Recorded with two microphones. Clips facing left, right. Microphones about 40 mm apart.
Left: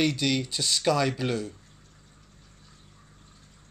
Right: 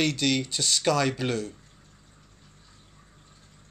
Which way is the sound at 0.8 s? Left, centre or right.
Right.